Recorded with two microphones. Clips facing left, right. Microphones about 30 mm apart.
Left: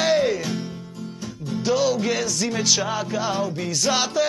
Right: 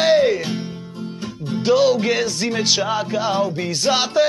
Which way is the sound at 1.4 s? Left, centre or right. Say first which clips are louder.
Right 5 dB; right.